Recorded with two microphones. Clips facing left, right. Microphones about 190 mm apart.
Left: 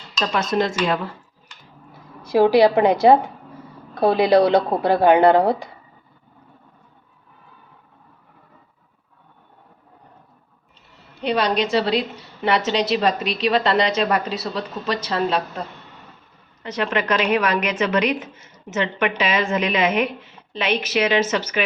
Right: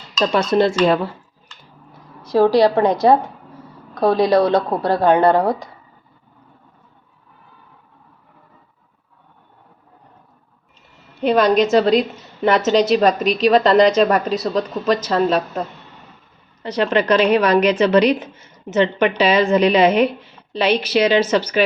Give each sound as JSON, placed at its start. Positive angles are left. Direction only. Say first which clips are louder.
{"t": 0.3, "sound": "a woman's voice", "louder": "right 5 dB", "side_deg": -30}
{"t": 2.2, "sound": "speech", "louder": "right 1 dB", "side_deg": 10}
{"t": 11.2, "sound": "a woman's voice", "louder": "right 6 dB", "side_deg": -45}
{"t": 16.6, "sound": "a woman's voice", "louder": "right 5 dB", "side_deg": -35}